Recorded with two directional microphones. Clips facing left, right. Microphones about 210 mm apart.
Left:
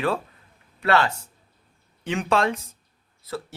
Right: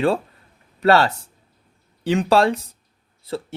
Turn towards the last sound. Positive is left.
turn(degrees=-30)  # may be behind; listen again after turning